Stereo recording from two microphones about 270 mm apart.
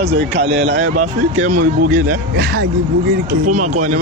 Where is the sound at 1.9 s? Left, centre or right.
Right.